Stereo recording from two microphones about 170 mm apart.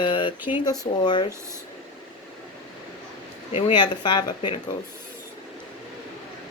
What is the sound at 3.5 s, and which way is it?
Speech, 35° left (ahead or behind).